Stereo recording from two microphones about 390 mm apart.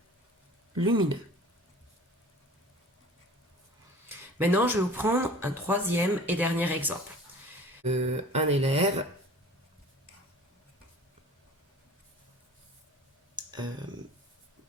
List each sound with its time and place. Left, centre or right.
0.8 s speech: centre
4.4 s speech: centre
7.9 s speech: centre
13.3 s clicking: centre